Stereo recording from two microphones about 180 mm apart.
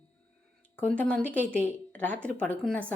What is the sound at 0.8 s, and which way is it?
A woman's voice, 5° left (ahead or behind).